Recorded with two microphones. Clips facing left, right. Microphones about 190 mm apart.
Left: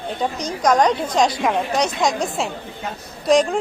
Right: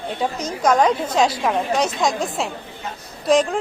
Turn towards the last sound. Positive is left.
turn(degrees=0)  # may be behind; listen again after turning